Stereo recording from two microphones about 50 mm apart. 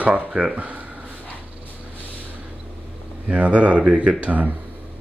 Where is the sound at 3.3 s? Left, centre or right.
Right.